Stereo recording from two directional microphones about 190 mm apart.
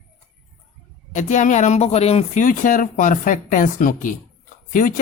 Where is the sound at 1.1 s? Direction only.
40° left (ahead or behind).